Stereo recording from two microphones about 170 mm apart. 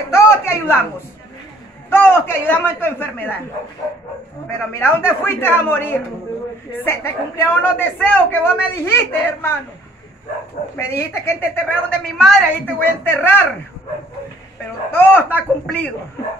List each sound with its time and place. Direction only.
0.1 s a sound: 15° left (ahead or behind)
1.9 s a woman's voice: 15° left (ahead or behind)
4.5 s a woman's voice: 15° left (ahead or behind)
10.8 s a woman's voice: 15° left (ahead or behind)
14.9 s a woman's voice: 10° left (ahead or behind)